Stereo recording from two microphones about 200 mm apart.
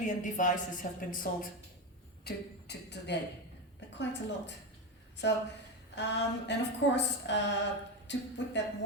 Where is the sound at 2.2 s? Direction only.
55° left (ahead or behind).